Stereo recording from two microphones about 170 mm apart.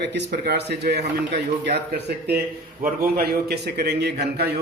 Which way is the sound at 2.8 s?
60° right (ahead or behind).